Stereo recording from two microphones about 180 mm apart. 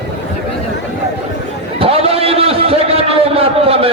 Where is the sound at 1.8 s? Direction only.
35° right (ahead or behind).